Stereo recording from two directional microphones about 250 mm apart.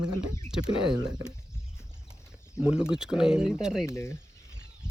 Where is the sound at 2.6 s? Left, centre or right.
Centre.